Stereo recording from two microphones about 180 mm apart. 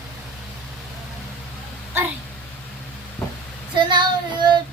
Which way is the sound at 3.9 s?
25° right (ahead or behind).